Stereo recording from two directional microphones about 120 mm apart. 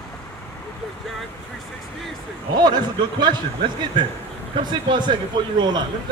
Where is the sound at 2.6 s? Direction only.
35° right (ahead or behind).